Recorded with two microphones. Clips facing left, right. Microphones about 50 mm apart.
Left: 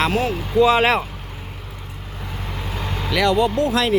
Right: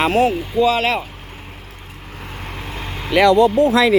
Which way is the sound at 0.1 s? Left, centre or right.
Right.